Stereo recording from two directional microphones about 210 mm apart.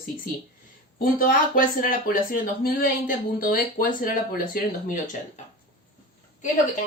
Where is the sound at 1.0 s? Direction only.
45° left (ahead or behind).